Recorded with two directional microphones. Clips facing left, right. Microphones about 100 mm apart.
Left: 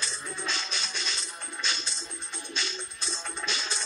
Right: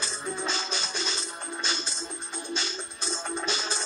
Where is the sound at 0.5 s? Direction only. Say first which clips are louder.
Right 4 dB; 25° right (ahead or behind).